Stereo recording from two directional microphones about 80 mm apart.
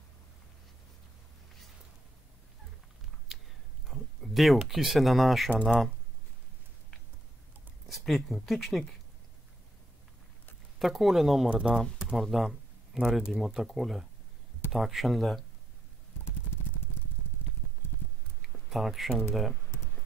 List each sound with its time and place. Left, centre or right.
3.3 s a sound: centre
3.9 s speech: centre
7.9 s speech: centre
10.8 s speech: centre
18.7 s speech: centre